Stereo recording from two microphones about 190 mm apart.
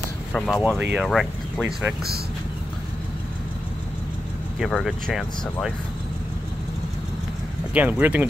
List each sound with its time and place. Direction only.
0.3 s speech: centre (ahead or behind)
4.6 s speech: centre (ahead or behind)
7.7 s speech: 10° right (ahead or behind)